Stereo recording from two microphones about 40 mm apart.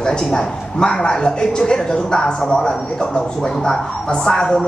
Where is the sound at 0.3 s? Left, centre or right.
Centre.